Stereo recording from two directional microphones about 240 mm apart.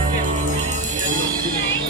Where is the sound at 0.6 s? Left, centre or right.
Right.